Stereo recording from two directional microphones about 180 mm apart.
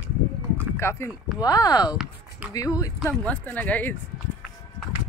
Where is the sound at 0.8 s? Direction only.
15° left (ahead or behind).